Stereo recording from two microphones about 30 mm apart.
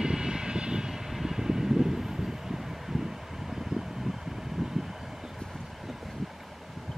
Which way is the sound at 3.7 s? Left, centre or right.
Centre.